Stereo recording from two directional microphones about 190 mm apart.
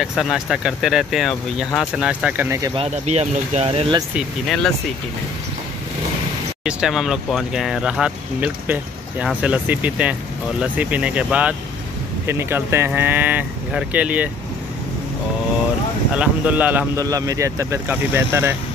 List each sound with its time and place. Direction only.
0.0 s speech: centre (ahead or behind)
2.7 s speech: 30° right (ahead or behind)
6.6 s speech: 5° right (ahead or behind)
16.2 s speech: 10° right (ahead or behind)